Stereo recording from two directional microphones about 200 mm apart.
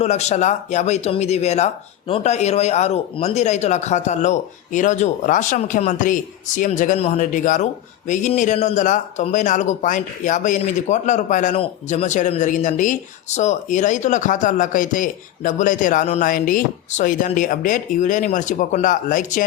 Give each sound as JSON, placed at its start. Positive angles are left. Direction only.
{"t": 0.0, "sound": "speech", "side_deg": 35}